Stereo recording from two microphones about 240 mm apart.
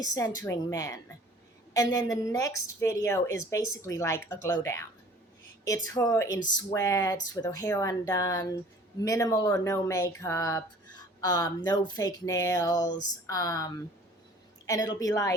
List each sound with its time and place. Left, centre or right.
0.0 s a woman's voice: centre